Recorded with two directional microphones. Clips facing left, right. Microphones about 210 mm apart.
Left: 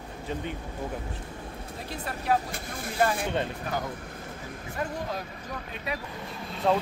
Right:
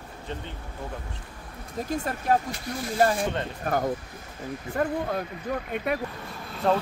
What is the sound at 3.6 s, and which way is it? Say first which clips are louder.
Speech: right 6 dB; 50° right (ahead or behind).